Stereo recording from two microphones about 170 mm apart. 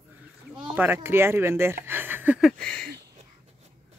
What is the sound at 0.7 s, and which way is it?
Speech, 10° right (ahead or behind).